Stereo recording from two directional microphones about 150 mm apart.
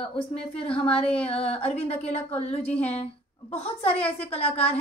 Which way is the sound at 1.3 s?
40° left (ahead or behind).